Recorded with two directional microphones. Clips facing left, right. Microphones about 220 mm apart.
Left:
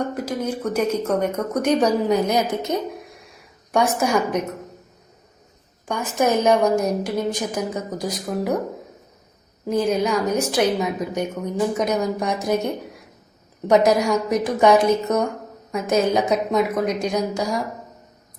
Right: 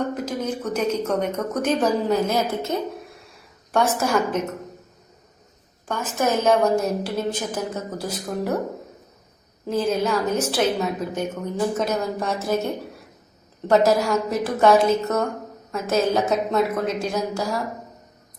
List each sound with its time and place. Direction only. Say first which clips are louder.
0.1 s a woman's voice: left 1 dB; 10° left (ahead or behind)
5.9 s a woman's voice: left 3 dB; 15° left (ahead or behind)
9.6 s a woman's voice: left 2 dB; 15° left (ahead or behind)
13.7 s a woman's voice: left 1 dB; 15° left (ahead or behind)